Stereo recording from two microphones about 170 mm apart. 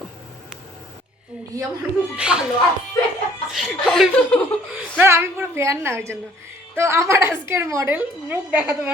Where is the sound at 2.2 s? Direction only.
5° right (ahead or behind).